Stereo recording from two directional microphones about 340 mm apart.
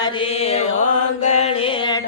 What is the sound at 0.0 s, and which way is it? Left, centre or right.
Music, centre.